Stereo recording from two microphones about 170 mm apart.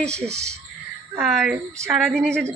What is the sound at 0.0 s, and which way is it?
Speech, 40° right (ahead or behind).